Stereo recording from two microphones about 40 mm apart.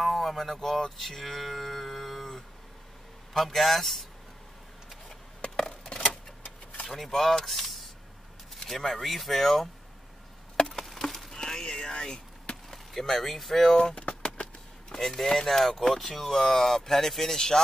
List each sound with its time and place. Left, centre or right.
0.0 s speech: centre
5.6 s tick-tock: left
7.0 s speech: centre
10.7 s chop: centre
11.3 s a sound: centre
12.7 s speech: centre
13.9 s a sound: left
15.0 s speech: centre